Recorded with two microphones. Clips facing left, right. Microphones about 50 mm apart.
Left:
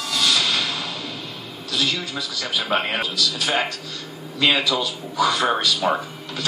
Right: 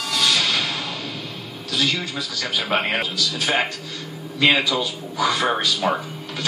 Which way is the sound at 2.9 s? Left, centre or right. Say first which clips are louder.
Even; right.